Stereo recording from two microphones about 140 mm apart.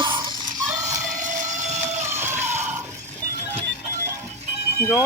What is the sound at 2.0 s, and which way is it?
Music, 15° right (ahead or behind).